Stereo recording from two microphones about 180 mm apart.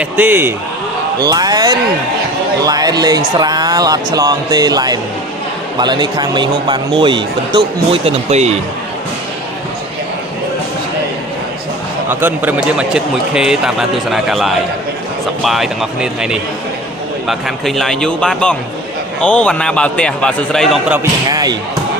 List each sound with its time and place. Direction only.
0.0 s a man's voice: 10° right (ahead or behind); by 7.6 s 25° right (ahead or behind)
8.0 s speech: 40° right (ahead or behind)
12.2 s a man's voice: 10° right (ahead or behind)
21.0 s speech: 20° right (ahead or behind)